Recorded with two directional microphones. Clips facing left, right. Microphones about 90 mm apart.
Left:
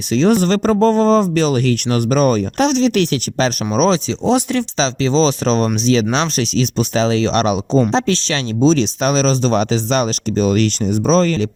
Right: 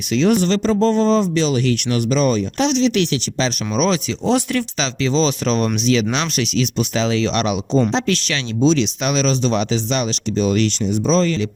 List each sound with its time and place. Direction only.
0.1 s speech: 35° left (ahead or behind)
3.8 s speech: 35° left (ahead or behind)
4.3 s speech: 20° left (ahead or behind)
4.8 s speech: 35° left (ahead or behind)